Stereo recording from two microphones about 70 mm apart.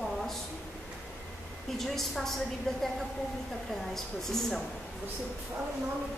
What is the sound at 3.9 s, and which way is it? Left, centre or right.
Speech, centre.